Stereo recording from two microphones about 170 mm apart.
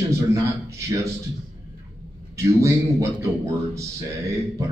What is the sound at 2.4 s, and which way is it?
Speech, 15° right (ahead or behind).